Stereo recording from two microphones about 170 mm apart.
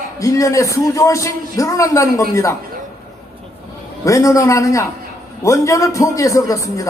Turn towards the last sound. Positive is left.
turn(degrees=20)  # may be behind; listen again after turning